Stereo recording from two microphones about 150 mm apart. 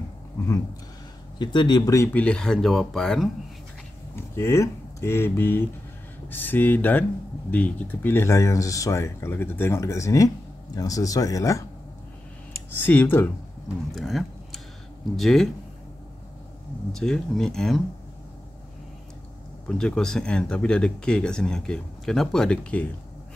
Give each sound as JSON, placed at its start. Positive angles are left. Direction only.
{"t": 1.4, "sound": "speech", "side_deg": 30}
{"t": 2.1, "sound": "speech", "side_deg": 5}
{"t": 4.1, "sound": "speech", "side_deg": 15}
{"t": 12.8, "sound": "speech", "side_deg": 15}
{"t": 13.9, "sound": "speech", "side_deg": 0}
{"t": 16.9, "sound": "speech", "side_deg": 0}
{"t": 19.7, "sound": "speech", "side_deg": 5}